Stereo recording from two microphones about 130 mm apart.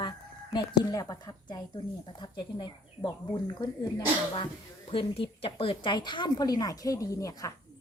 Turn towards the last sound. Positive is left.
turn(degrees=25)  # may be behind; listen again after turning